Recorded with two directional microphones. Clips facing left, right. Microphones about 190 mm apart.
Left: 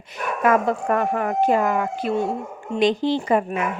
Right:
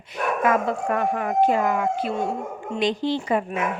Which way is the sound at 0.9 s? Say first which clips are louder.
Left 2 dB; 45° left (ahead or behind).